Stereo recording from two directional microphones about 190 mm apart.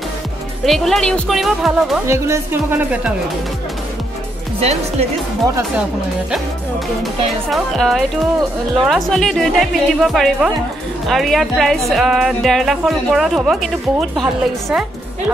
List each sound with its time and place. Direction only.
0.7 s speech: centre (ahead or behind)
2.0 s speech: 15° right (ahead or behind)
4.6 s speech: 35° right (ahead or behind)
7.0 s speech: centre (ahead or behind)